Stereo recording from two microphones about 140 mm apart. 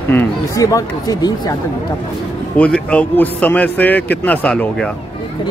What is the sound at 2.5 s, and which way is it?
A man's voice, 10° left (ahead or behind).